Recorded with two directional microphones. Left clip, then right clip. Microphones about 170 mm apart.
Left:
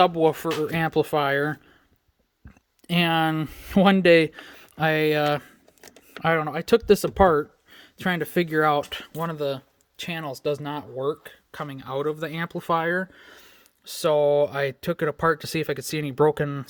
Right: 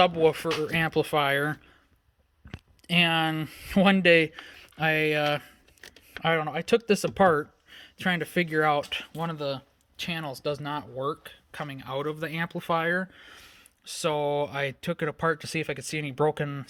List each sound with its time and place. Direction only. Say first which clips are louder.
0.0 s speech: left 2 dB; 35° left (ahead or behind)
2.8 s speech: left 1 dB; 35° left (ahead or behind)